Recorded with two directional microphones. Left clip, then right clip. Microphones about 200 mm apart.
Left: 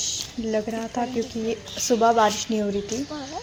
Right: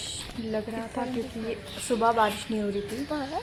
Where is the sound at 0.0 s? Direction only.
15° left (ahead or behind).